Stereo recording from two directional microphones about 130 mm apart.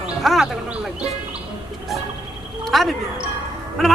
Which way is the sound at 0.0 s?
Centre (ahead or behind).